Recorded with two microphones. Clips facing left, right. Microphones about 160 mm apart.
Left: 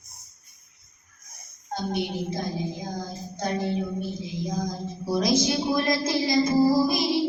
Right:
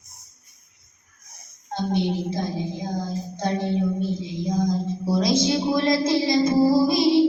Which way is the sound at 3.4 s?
25° right (ahead or behind).